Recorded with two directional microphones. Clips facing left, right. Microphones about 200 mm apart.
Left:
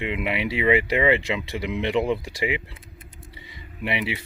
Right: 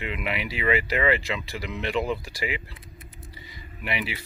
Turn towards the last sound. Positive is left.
turn(degrees=25)  # may be behind; listen again after turning